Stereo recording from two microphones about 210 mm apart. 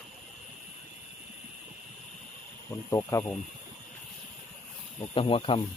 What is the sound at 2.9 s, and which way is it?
Speech, 15° left (ahead or behind).